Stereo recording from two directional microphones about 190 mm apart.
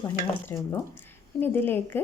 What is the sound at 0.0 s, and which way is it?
A woman's voice, 15° left (ahead or behind).